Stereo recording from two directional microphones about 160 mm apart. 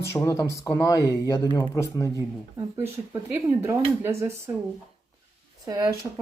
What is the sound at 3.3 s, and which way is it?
Speech, 15° right (ahead or behind).